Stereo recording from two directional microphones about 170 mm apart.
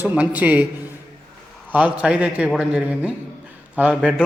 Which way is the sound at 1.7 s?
10° right (ahead or behind).